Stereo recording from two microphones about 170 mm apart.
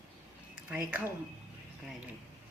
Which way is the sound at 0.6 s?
10° right (ahead or behind).